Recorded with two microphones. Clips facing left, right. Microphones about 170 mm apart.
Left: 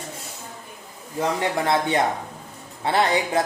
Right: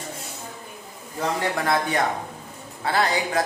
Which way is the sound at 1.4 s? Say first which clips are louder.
Even; 25° left (ahead or behind).